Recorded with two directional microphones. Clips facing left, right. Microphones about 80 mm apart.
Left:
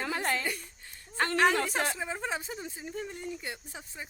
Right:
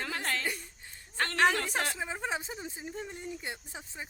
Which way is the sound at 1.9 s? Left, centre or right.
Centre.